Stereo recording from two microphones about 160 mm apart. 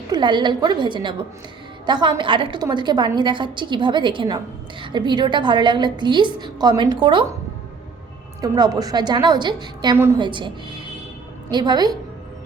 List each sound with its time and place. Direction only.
0.1 s a woman's voice: 30° right (ahead or behind)
8.4 s a woman's voice: 25° right (ahead or behind)